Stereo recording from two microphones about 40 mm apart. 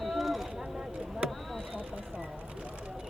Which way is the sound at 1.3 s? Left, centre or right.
Centre.